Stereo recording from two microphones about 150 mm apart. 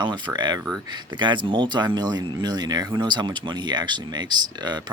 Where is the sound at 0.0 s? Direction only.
30° right (ahead or behind).